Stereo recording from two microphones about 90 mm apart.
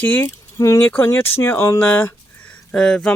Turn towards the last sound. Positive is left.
turn(degrees=10)  # may be behind; listen again after turning